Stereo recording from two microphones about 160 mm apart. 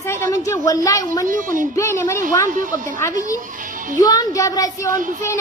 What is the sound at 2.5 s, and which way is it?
Speech, 55° right (ahead or behind).